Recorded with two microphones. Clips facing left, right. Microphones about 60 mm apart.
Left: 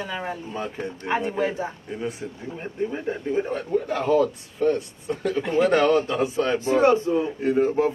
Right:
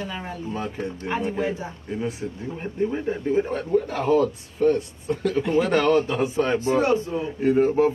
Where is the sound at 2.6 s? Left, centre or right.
Centre.